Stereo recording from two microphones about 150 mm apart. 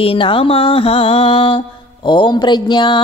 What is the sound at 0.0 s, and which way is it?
Speech, 35° left (ahead or behind).